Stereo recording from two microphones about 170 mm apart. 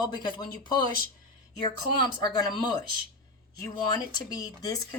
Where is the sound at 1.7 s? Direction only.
25° left (ahead or behind).